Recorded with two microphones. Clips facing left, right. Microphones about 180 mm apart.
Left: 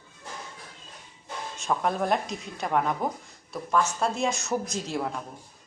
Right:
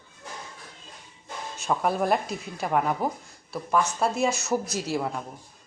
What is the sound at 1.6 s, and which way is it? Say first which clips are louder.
A woman's voice: right 2 dB; 5° right (ahead or behind).